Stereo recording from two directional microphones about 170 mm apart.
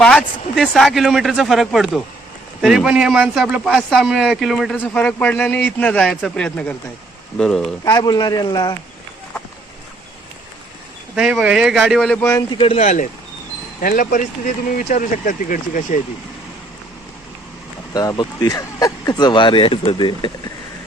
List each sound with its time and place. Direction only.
0.0 s speech: 5° left (ahead or behind)
7.9 s speech: 25° left (ahead or behind)
11.1 s speech: 5° right (ahead or behind)
12.2 s speech: 20° left (ahead or behind)
12.5 s speech: 35° left (ahead or behind)
13.8 s speech: 55° left (ahead or behind)
17.9 s speech: 20° left (ahead or behind)